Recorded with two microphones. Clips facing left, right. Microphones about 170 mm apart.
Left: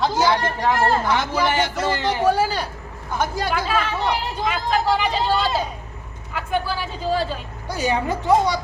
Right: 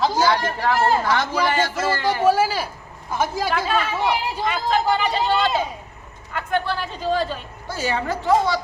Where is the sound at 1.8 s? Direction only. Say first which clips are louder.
Even; 20° left (ahead or behind).